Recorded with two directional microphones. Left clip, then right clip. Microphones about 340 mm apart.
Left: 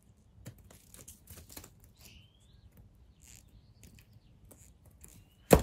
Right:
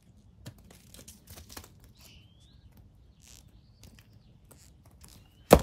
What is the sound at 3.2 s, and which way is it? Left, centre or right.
Cricket, centre.